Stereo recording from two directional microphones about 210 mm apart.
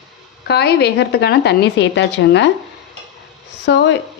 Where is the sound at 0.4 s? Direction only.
50° left (ahead or behind).